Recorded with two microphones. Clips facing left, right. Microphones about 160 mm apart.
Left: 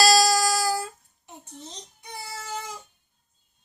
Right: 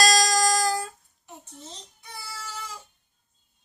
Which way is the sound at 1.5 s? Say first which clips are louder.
Left 2 dB; 20° left (ahead or behind).